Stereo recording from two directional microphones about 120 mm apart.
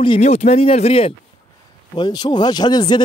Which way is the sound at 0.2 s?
65° left (ahead or behind).